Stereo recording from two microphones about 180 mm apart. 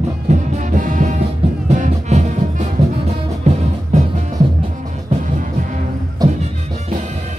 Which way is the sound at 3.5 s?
35° right (ahead or behind).